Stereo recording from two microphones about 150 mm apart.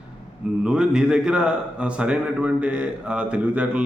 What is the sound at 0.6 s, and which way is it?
A man's voice, 5° right (ahead or behind).